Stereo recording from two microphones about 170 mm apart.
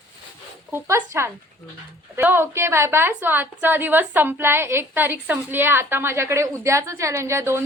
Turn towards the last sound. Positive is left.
turn(degrees=-15)  # may be behind; listen again after turning